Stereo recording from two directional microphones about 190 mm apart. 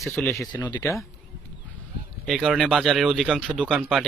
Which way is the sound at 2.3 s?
Centre (ahead or behind).